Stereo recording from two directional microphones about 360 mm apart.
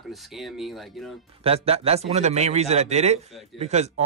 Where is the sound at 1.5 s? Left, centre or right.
Centre.